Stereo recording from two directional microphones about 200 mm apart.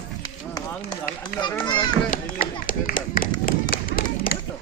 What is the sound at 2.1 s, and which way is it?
Speech, 45° left (ahead or behind).